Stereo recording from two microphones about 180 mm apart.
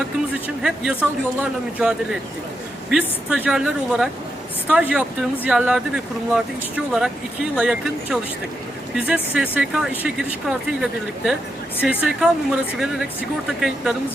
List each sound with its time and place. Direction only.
0.4 s speech: 5° right (ahead or behind)